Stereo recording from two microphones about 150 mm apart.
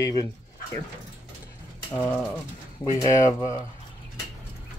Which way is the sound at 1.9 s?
15° left (ahead or behind).